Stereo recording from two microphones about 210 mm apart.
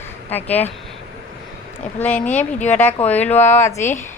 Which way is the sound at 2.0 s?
5° left (ahead or behind).